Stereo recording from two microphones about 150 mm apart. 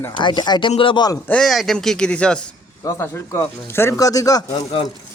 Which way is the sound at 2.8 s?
20° left (ahead or behind).